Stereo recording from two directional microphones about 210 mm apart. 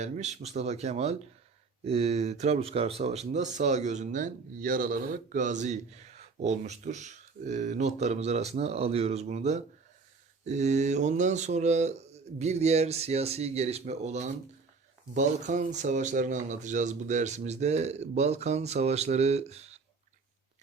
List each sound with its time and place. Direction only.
0.0 s speech: 35° right (ahead or behind)